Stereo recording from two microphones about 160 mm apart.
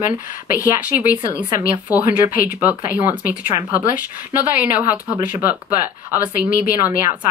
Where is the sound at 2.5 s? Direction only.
10° right (ahead or behind).